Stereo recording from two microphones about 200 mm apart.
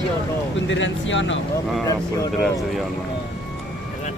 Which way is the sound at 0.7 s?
65° left (ahead or behind).